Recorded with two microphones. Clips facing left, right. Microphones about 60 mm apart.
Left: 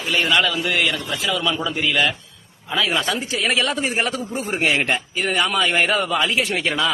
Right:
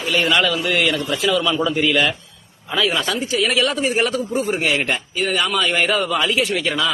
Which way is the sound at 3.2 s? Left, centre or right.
Left.